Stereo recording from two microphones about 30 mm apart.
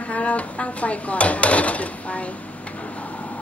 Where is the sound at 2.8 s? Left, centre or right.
Left.